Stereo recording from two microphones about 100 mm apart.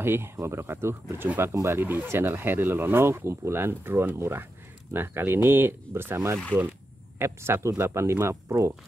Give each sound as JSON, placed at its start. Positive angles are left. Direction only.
{"t": 0.0, "sound": "speech", "side_deg": -25}